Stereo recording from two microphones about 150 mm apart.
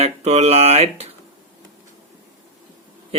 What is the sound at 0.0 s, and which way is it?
Speech, 45° right (ahead or behind).